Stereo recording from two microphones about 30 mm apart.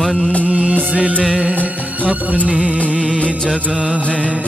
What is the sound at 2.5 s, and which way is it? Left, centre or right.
Music of bollywood, right.